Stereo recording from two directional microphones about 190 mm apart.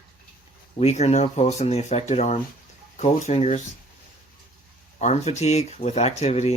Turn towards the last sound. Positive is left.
turn(degrees=35)  # may be behind; listen again after turning